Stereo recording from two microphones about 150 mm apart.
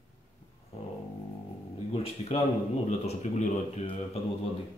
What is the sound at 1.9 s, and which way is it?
A man's voice, 40° left (ahead or behind).